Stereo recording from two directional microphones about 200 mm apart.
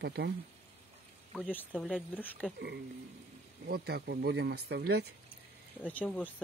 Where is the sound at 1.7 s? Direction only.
5° right (ahead or behind).